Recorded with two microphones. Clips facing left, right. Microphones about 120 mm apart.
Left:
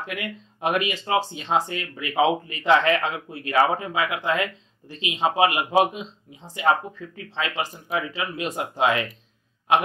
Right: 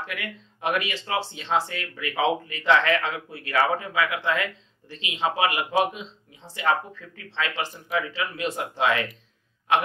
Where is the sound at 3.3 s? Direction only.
15° left (ahead or behind).